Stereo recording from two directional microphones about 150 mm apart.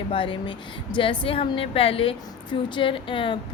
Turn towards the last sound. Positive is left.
turn(degrees=35)  # may be behind; listen again after turning